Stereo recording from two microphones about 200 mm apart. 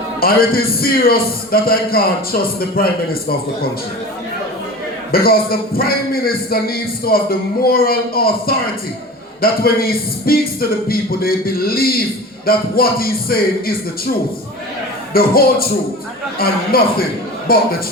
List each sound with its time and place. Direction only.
0.2 s a man's voice: 50° left (ahead or behind)
5.1 s a man's voice: 50° left (ahead or behind)
15.1 s a man's voice: 50° left (ahead or behind)